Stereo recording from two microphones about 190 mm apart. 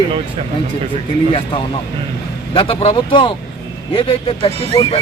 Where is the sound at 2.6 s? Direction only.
25° left (ahead or behind).